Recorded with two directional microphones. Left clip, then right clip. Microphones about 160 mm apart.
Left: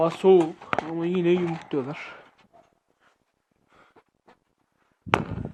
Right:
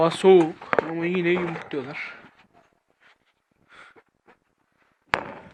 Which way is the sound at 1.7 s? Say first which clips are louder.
Left 1 dB; 55° left (ahead or behind).